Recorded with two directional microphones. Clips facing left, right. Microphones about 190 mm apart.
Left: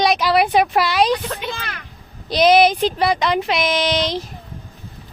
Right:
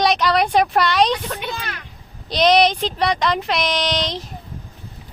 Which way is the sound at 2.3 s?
5° left (ahead or behind).